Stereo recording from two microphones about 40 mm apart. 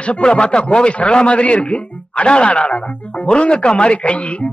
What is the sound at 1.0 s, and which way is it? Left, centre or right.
A man's voice, left.